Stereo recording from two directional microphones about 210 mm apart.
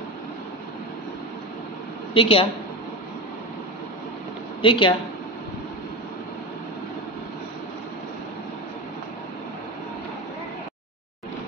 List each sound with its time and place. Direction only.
2.1 s a woman's voice: 25° left (ahead or behind)
4.6 s speech: 25° left (ahead or behind)